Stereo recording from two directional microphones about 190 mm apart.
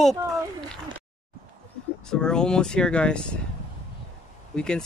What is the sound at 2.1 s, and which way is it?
Speech, 5° left (ahead or behind).